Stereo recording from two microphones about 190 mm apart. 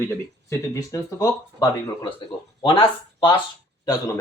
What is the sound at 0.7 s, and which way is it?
Speech, 15° left (ahead or behind).